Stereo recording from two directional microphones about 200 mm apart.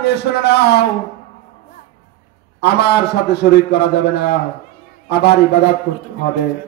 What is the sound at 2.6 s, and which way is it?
A man's voice, 55° left (ahead or behind).